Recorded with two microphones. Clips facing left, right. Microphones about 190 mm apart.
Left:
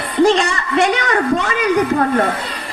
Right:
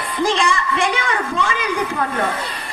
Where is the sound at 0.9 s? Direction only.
40° left (ahead or behind).